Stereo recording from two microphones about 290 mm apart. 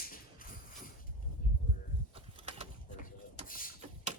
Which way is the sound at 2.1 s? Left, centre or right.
Centre.